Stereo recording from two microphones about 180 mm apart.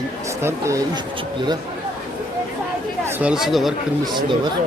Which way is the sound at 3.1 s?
5° right (ahead or behind).